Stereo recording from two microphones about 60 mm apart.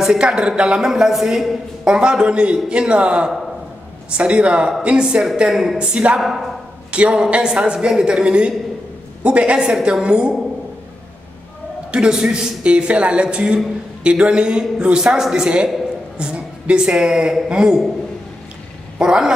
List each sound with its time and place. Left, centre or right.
0.0 s a man's voice: centre
1.9 s a man's voice: centre
5.8 s speech: centre
6.1 s a woman's voice: centre
6.9 s a man's voice: centre
11.9 s a man's voice: centre
18.9 s a man's voice: centre